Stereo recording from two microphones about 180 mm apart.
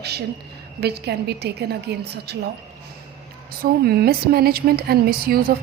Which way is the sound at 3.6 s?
60° right (ahead or behind).